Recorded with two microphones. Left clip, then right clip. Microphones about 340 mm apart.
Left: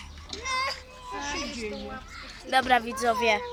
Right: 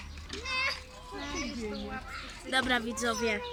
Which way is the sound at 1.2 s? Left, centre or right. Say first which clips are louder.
Left 5 dB; left.